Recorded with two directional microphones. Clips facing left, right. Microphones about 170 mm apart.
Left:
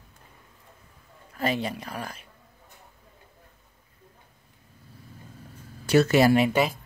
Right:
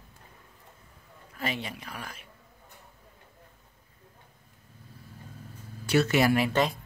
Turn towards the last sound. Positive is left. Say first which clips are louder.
# left 2 dB
turn(degrees=5)  # may be behind; listen again after turning